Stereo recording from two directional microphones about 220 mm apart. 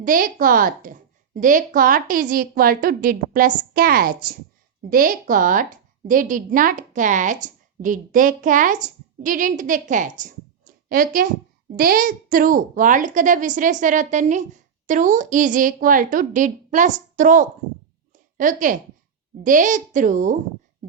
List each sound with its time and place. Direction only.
0.0 s a woman's voice: 40° right (ahead or behind)
18.1 s a sound: 35° right (ahead or behind)
19.4 s a woman's voice: 35° right (ahead or behind)